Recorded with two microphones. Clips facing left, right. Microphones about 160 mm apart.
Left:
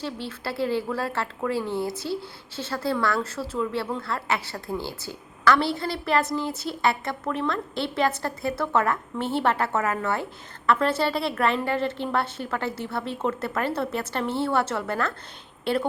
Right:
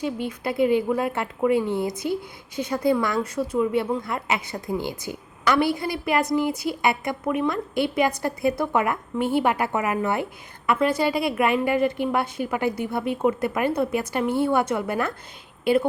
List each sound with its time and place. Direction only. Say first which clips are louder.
0.0 s a woman's voice: right 5 dB; 15° right (ahead or behind)